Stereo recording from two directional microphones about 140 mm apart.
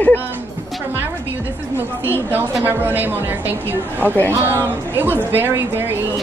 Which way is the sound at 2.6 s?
15° right (ahead or behind).